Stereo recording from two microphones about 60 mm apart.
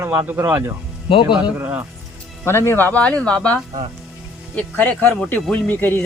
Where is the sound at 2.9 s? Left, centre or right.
Centre.